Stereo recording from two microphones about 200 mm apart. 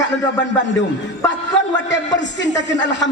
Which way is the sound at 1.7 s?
65° left (ahead or behind).